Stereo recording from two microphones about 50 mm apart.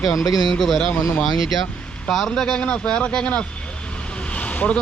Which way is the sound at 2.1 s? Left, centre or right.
Centre.